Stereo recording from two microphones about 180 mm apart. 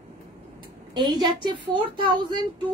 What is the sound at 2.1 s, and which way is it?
Speech, 25° right (ahead or behind).